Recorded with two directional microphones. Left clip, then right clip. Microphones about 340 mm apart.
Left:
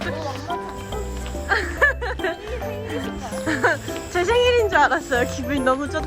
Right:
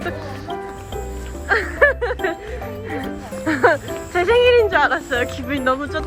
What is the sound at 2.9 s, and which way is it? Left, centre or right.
Speech, centre.